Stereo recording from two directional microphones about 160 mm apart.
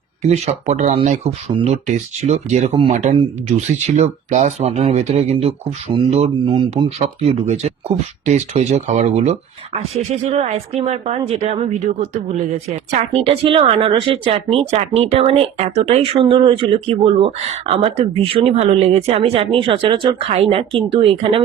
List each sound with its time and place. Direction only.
0.2 s a woman's voice: 45° right (ahead or behind)